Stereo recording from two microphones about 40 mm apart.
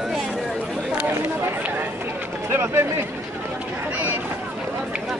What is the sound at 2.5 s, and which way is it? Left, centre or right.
Speech, right.